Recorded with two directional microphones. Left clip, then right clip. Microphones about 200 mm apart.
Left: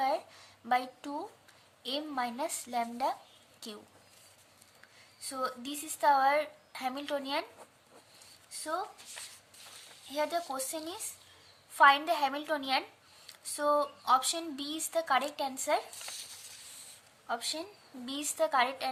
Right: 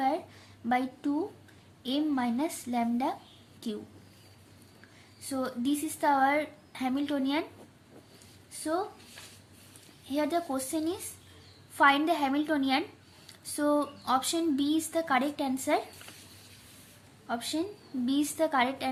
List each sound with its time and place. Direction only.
0.7 s a woman's voice: 20° left (ahead or behind)
5.2 s speech: 15° left (ahead or behind)
8.5 s speech: 10° left (ahead or behind)
10.1 s speech: 10° left (ahead or behind)
17.2 s speech: 15° left (ahead or behind)